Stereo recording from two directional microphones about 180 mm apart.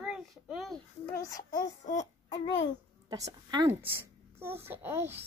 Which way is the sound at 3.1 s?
20° right (ahead or behind).